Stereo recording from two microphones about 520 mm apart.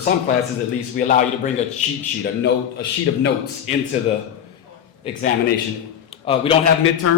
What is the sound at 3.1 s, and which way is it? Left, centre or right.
Speech, left.